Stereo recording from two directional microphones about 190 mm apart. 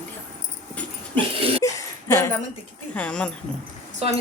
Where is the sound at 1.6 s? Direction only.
15° left (ahead or behind).